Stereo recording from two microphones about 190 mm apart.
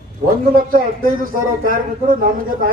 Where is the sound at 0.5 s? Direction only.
50° right (ahead or behind).